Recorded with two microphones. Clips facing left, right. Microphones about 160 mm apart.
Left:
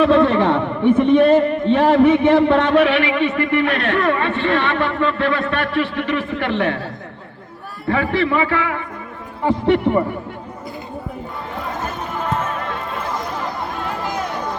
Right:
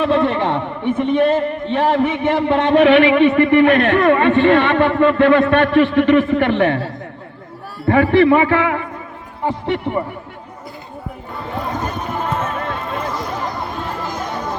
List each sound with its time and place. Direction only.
0.0 s a sound: 20° right (ahead or behind)
1.7 s a man's voice: 15° right (ahead or behind)
2.8 s a man's voice: 50° right (ahead or behind)
7.9 s a man's voice: 50° right (ahead or behind)
9.4 s a man's voice: 15° right (ahead or behind)